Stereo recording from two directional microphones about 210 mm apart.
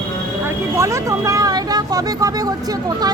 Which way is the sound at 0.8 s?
15° right (ahead or behind).